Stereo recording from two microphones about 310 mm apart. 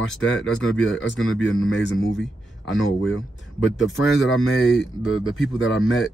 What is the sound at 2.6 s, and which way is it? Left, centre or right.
Speech, left.